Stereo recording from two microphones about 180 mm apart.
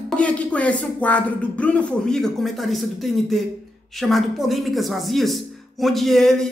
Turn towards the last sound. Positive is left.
turn(degrees=0)  # may be behind; listen again after turning